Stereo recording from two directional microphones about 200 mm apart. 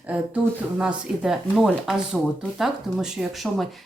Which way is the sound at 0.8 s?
5° right (ahead or behind).